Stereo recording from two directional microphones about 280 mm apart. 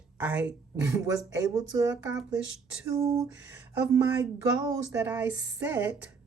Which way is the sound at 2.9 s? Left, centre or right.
Centre.